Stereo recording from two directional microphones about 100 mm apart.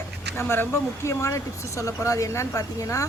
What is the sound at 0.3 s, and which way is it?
A woman's voice, 25° left (ahead or behind).